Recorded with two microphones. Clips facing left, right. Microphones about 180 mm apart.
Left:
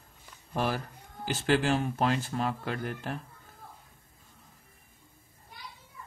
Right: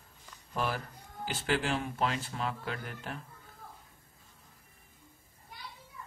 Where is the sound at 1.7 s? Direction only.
45° left (ahead or behind).